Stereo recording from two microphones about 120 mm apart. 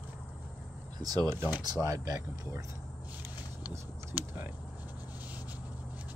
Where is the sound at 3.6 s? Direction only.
15° right (ahead or behind).